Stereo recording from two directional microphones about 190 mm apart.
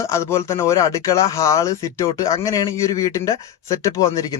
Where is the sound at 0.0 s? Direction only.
15° left (ahead or behind).